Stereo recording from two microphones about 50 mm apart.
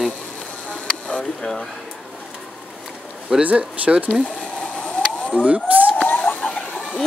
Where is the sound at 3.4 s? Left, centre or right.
Right.